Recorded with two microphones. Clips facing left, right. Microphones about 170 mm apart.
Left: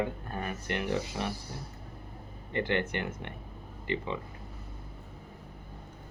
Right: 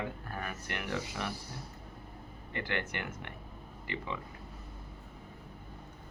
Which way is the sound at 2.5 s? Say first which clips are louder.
Left 7 dB; 25° left (ahead or behind).